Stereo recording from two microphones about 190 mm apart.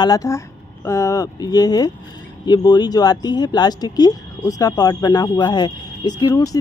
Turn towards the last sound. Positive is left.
turn(degrees=20)  # may be behind; listen again after turning